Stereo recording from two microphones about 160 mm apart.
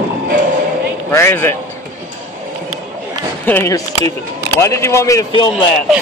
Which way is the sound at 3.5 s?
15° left (ahead or behind).